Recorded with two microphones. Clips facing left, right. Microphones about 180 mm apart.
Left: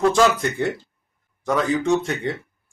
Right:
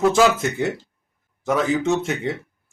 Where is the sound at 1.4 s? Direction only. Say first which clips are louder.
Right 1 dB; 20° right (ahead or behind).